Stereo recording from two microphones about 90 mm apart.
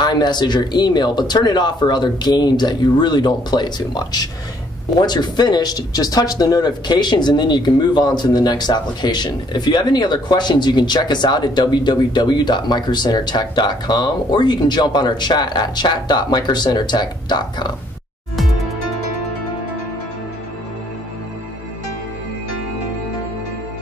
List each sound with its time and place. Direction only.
0.0 s speech: 55° left (ahead or behind)